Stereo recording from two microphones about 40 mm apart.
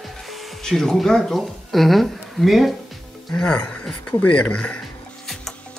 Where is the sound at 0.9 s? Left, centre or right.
Centre.